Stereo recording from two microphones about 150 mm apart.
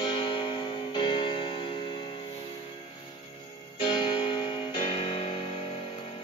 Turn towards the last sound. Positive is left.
turn(degrees=35)  # may be behind; listen again after turning